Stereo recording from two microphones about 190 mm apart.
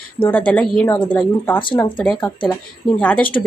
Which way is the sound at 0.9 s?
25° left (ahead or behind).